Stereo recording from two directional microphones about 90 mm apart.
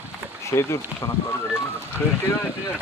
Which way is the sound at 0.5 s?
35° left (ahead or behind).